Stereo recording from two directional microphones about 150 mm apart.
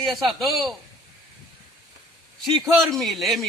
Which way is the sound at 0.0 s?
Centre (ahead or behind).